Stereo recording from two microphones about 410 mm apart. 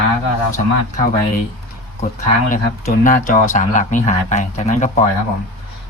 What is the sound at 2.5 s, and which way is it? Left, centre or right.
Speech, centre.